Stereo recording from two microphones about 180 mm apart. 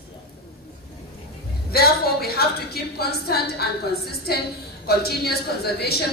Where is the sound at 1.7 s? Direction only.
60° left (ahead or behind).